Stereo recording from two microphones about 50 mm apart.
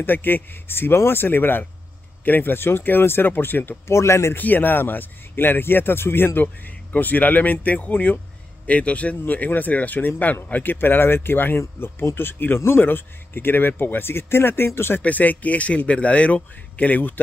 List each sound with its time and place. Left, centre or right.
0.0 s speech: left
3.8 s speech: left
4.4 s speech: left
6.4 s speech: left
9.2 s speech: left
12.5 s speech: left
12.8 s speech: left
15.0 s speech: left